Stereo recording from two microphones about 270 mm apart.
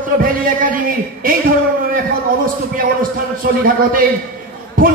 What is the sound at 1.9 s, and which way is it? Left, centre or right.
A man's voice, right.